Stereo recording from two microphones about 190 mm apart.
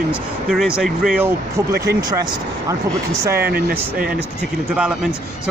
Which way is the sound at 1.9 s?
60° right (ahead or behind).